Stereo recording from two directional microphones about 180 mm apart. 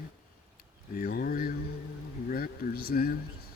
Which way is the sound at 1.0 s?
55° left (ahead or behind).